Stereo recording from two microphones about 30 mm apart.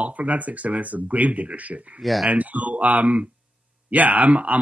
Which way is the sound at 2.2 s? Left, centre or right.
Right.